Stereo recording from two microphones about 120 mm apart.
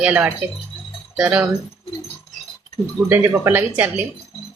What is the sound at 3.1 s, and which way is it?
Speech, 20° right (ahead or behind).